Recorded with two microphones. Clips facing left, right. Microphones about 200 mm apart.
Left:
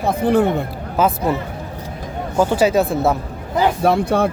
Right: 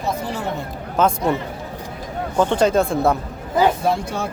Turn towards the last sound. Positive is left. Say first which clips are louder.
# left 6 dB
turn(degrees=60)  # may be behind; listen again after turning